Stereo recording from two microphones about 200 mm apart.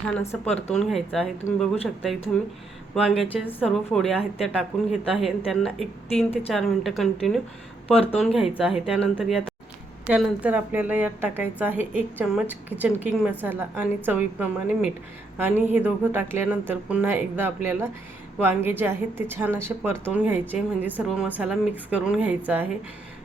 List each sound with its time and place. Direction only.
0.2 s speech: 10° left (ahead or behind)
2.9 s speech: centre (ahead or behind)